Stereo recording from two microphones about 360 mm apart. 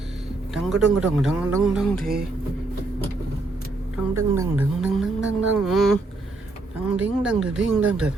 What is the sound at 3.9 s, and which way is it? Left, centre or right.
Speech, centre.